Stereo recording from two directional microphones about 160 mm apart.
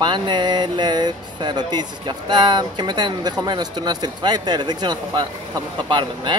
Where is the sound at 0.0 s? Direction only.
30° right (ahead or behind).